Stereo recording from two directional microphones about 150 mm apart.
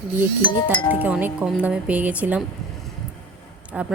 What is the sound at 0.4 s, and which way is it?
Speech, 30° left (ahead or behind).